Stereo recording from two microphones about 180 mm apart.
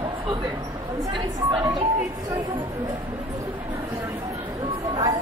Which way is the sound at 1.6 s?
25° right (ahead or behind).